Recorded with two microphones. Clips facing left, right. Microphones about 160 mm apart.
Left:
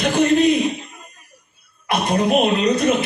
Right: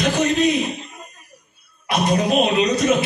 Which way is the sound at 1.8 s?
55° left (ahead or behind).